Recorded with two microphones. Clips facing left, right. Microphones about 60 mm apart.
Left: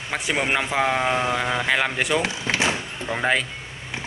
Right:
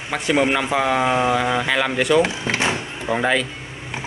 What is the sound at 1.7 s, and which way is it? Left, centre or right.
Speech, centre.